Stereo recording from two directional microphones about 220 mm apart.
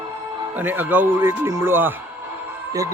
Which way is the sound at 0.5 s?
10° right (ahead or behind).